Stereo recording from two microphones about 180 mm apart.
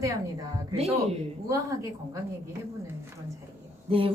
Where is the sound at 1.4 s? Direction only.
20° right (ahead or behind).